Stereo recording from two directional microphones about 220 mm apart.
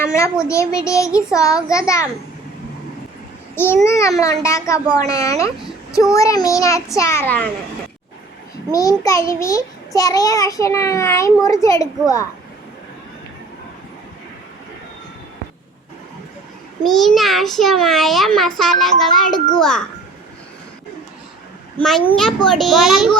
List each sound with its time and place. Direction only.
0.0 s a child's voice: 10° left (ahead or behind)
3.5 s a child's voice: 10° left (ahead or behind)
8.7 s a child's voice: 15° left (ahead or behind)
16.8 s a child's voice: centre (ahead or behind)
21.8 s a child's voice: 5° left (ahead or behind)